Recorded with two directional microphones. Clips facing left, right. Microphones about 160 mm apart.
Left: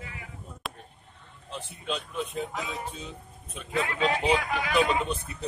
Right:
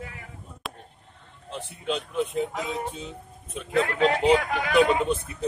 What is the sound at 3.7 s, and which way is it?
Speech, 60° right (ahead or behind).